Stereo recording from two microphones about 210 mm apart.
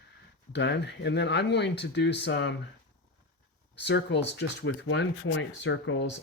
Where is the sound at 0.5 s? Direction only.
55° left (ahead or behind).